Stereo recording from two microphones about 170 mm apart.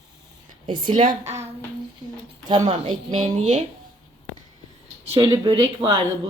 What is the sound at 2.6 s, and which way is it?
Speech, 40° right (ahead or behind).